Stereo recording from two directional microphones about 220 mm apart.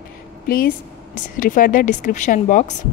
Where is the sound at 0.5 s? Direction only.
40° left (ahead or behind).